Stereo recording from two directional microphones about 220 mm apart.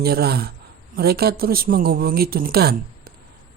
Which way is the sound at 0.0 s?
45° right (ahead or behind).